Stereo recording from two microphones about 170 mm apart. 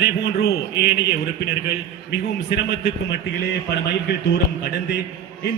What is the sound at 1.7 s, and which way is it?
A man's voice, 80° left.